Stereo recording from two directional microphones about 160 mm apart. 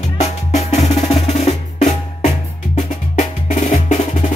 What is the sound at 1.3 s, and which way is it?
Percussion, 45° left (ahead or behind).